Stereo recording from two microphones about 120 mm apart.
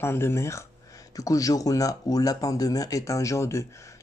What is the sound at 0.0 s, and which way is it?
Speech, 20° left (ahead or behind).